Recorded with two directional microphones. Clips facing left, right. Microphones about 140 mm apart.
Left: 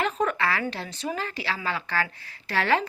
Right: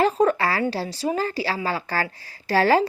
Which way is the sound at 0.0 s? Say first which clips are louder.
Right 6 dB; 35° right (ahead or behind).